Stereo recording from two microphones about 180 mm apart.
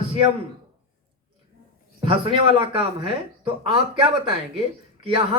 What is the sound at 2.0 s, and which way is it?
Speech, 30° right (ahead or behind).